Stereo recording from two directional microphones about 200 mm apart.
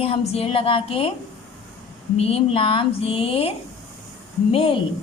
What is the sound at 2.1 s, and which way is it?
Speech, 30° left (ahead or behind).